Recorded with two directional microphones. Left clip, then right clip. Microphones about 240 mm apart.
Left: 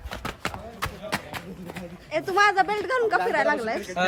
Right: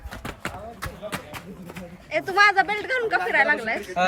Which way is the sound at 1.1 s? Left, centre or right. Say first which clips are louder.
Left 3 dB; left.